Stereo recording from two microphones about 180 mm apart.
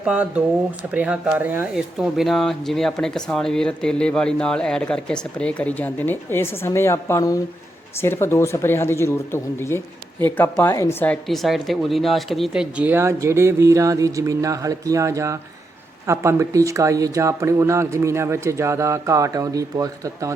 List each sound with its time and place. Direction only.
0.0 s a woman's voice: 5° right (ahead or behind)